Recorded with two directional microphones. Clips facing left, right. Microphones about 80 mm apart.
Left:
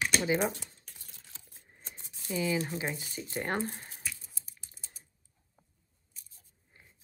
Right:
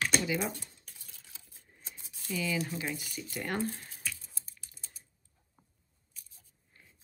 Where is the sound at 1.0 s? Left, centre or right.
Left.